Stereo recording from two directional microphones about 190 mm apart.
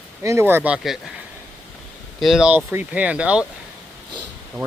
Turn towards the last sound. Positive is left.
turn(degrees=0)  # may be behind; listen again after turning